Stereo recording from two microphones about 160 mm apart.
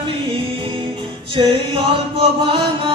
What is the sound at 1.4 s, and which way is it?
Music, 35° right (ahead or behind).